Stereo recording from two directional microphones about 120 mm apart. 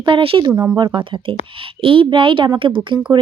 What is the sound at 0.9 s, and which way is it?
Speech, 40° right (ahead or behind).